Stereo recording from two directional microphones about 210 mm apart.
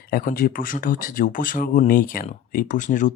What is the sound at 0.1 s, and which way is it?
Speech, 40° left (ahead or behind).